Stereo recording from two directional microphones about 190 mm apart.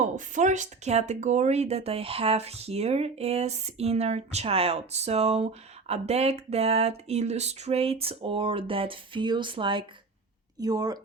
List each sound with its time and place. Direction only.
0.3 s speech: 40° right (ahead or behind); by 11.0 s 20° right (ahead or behind)